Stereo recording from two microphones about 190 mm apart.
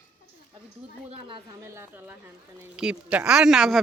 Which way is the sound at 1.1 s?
25° right (ahead or behind).